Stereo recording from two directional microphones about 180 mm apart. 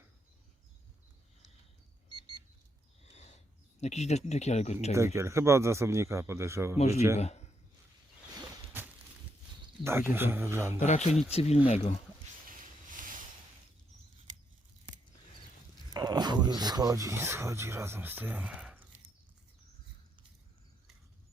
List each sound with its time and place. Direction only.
3.0 s a sound: 35° left (ahead or behind)
4.9 s a man's voice: 15° right (ahead or behind)
6.7 s speech: 35° left (ahead or behind)
9.8 s a man's voice: 10° right (ahead or behind)
10.8 s speech: 40° left (ahead or behind)
13.0 s a sound: 50° right (ahead or behind)
15.9 s speech: 20° right (ahead or behind); by 18.9 s 5° right (ahead or behind)